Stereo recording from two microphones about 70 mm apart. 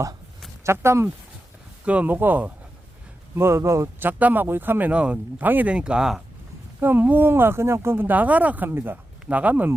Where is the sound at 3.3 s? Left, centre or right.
Right.